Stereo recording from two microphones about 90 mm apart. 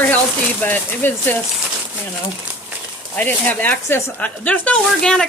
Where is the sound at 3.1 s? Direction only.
20° left (ahead or behind).